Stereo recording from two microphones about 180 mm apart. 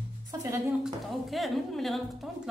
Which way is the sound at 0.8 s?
Centre (ahead or behind).